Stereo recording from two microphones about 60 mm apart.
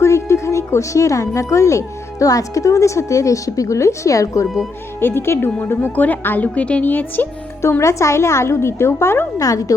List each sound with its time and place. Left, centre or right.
0.0 s a woman's voice: left
4.9 s a woman's voice: left
5.6 s speech: left
7.6 s a woman's voice: left
9.4 s speech: left